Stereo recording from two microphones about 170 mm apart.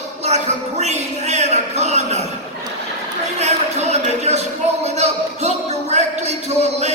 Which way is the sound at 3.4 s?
40° right (ahead or behind).